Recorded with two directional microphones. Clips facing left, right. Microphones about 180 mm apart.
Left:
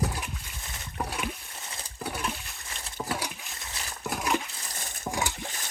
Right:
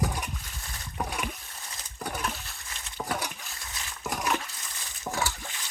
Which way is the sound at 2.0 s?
5° left (ahead or behind).